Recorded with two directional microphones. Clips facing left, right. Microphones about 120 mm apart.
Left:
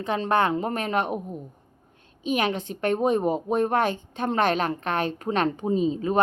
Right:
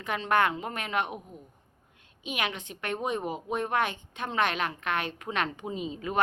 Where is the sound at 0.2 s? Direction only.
30° left (ahead or behind).